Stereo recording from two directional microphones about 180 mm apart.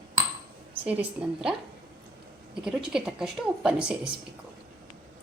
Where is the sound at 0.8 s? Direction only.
10° right (ahead or behind).